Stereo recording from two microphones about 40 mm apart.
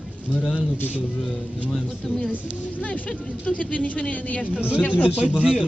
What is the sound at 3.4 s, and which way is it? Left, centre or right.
Speech, left.